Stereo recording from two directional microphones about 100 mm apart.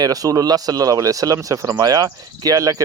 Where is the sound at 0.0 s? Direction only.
35° right (ahead or behind).